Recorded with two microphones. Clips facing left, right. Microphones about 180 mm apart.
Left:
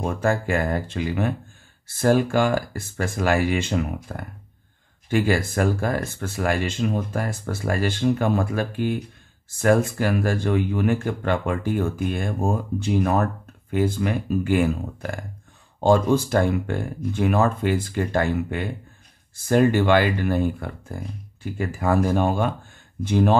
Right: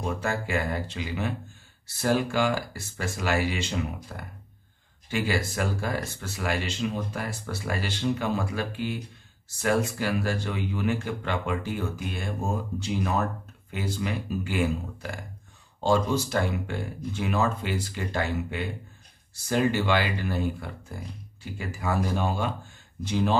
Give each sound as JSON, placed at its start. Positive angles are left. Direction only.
{"t": 0.0, "sound": "speech", "side_deg": 50}